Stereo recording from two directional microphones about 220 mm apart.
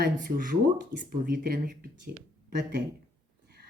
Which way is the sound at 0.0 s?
40° right (ahead or behind).